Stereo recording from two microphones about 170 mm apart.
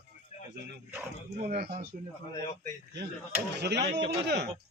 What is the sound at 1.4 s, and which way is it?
Speech, 60° right (ahead or behind).